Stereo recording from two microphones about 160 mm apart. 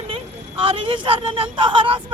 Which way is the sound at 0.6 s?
35° right (ahead or behind).